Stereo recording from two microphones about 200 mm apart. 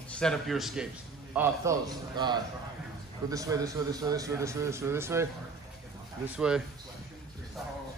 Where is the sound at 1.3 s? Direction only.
10° right (ahead or behind).